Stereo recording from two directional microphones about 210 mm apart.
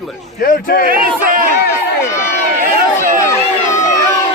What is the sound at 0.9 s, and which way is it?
Speech, 40° right (ahead or behind).